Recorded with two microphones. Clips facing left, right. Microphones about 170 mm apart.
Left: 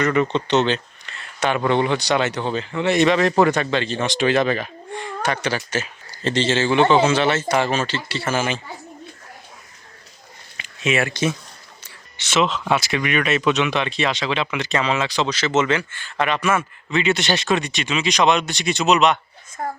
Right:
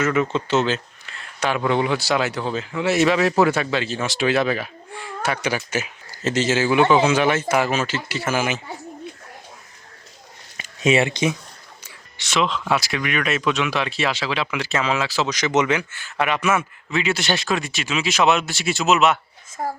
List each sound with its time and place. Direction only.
0.0 s speech: 5° right (ahead or behind)
10.9 s speech: 20° right (ahead or behind)
12.1 s a woman's voice: centre (ahead or behind)